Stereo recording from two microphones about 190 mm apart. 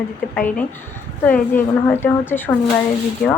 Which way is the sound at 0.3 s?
5° left (ahead or behind).